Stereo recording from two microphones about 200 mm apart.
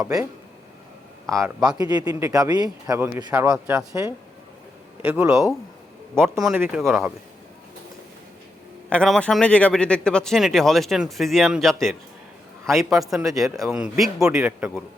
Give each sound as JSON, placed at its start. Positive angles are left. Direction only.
{"t": 1.3, "sound": "a man's voice", "side_deg": -15}
{"t": 8.9, "sound": "speech", "side_deg": 5}